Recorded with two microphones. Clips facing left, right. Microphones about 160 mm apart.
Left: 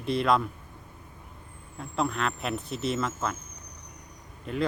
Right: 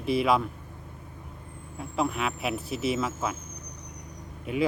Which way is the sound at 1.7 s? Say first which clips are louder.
Right 1 dB; 5° right (ahead or behind).